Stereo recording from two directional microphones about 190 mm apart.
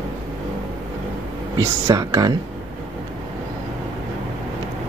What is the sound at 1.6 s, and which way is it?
Speech, 15° right (ahead or behind).